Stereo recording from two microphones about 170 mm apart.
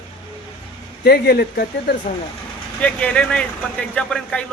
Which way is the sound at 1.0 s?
65° left (ahead or behind).